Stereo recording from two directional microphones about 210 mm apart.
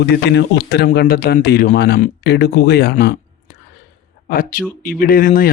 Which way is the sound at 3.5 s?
50° left (ahead or behind).